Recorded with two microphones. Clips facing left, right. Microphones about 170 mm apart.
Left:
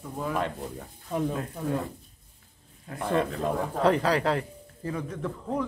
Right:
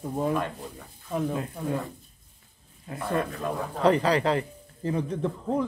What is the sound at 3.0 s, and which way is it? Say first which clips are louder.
Speech: left 2 dB; 25° left (ahead or behind).